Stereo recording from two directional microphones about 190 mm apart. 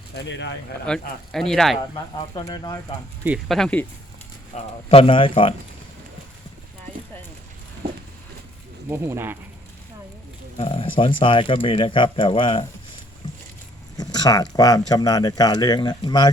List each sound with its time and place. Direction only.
0.2 s speech: 70° left (ahead or behind)
0.9 s speech: centre (ahead or behind)
2.3 s speech: 20° left (ahead or behind)
3.2 s speech: centre (ahead or behind)
4.5 s speech: 30° left (ahead or behind)
8.9 s speech: 15° right (ahead or behind)
10.6 s speech: 25° left (ahead or behind)
13.9 s a sound: 20° left (ahead or behind)
14.5 s speech: 20° left (ahead or behind)